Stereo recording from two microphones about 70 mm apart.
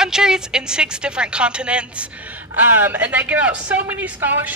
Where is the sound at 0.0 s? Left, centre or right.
Centre.